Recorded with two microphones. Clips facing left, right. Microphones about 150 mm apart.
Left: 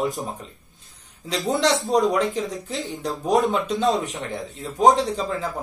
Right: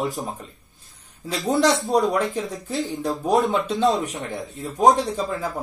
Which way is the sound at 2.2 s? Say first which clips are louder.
Left 1 dB; 20° left (ahead or behind).